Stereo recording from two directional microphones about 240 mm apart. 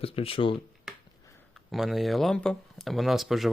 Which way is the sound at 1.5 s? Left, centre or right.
Centre.